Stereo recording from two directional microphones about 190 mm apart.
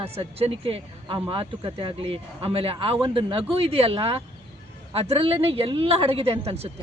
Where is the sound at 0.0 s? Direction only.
30° right (ahead or behind).